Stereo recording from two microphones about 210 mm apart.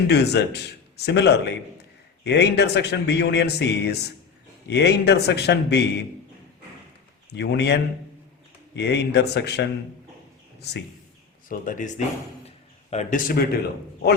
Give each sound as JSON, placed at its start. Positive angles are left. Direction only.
{"t": 0.1, "sound": "a man's voice", "side_deg": 50}
{"t": 7.3, "sound": "a man's voice", "side_deg": 55}
{"t": 11.4, "sound": "a man's voice", "side_deg": 40}